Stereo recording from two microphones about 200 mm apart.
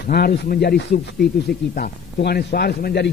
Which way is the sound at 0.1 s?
50° left (ahead or behind).